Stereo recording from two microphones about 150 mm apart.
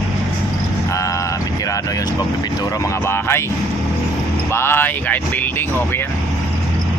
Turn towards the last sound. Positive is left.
turn(degrees=10)  # may be behind; listen again after turning